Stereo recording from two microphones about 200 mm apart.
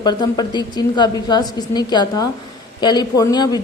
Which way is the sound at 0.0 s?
20° left (ahead or behind).